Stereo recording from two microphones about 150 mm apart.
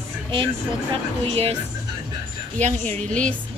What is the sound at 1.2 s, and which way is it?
Speech, 40° right (ahead or behind).